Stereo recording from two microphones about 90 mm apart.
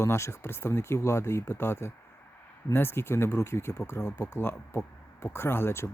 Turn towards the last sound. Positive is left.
turn(degrees=25)  # may be behind; listen again after turning